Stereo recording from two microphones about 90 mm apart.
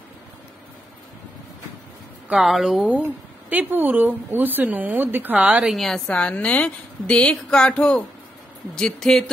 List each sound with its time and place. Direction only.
2.2 s speech: 5° right (ahead or behind)
3.0 s speech: 20° right (ahead or behind)
5.7 s a woman's voice: 5° left (ahead or behind)